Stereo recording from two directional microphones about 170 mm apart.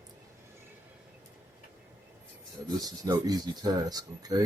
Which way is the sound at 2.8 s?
20° right (ahead or behind).